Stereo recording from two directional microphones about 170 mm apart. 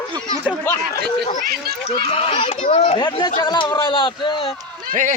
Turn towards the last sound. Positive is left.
turn(degrees=30)  # may be behind; listen again after turning